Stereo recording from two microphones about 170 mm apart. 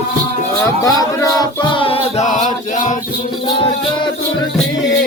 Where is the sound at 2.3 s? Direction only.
45° left (ahead or behind).